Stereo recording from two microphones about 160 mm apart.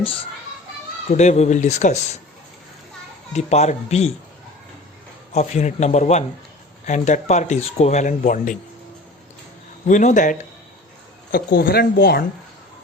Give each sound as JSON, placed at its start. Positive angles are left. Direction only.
{"t": 0.0, "sound": "a child's voice", "side_deg": 35}
{"t": 1.1, "sound": "speech", "side_deg": 45}
{"t": 3.3, "sound": "speech", "side_deg": 45}
{"t": 5.3, "sound": "speech", "side_deg": 45}
{"t": 9.8, "sound": "speech", "side_deg": 50}
{"t": 11.3, "sound": "speech", "side_deg": 70}